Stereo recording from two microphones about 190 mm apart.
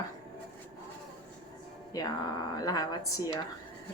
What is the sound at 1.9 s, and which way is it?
A woman's voice, 20° left (ahead or behind).